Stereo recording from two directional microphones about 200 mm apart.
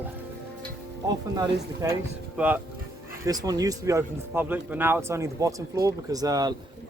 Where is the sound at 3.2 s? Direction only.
20° right (ahead or behind).